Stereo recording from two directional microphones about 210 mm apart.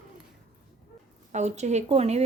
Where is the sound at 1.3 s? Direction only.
35° right (ahead or behind).